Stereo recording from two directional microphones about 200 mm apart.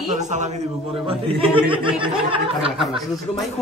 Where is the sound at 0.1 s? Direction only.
35° right (ahead or behind).